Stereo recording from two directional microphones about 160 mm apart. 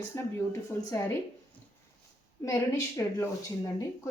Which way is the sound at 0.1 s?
20° left (ahead or behind).